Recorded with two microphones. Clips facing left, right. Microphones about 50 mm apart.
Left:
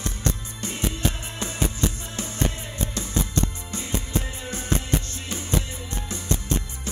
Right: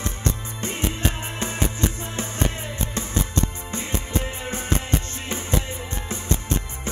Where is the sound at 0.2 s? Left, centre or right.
Right.